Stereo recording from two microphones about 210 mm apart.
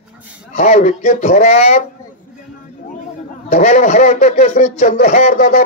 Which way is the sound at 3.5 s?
35° left (ahead or behind).